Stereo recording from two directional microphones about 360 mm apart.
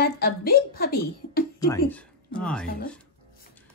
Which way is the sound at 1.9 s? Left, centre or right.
Centre.